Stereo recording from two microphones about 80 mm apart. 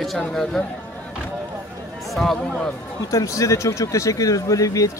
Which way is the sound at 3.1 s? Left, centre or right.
Left.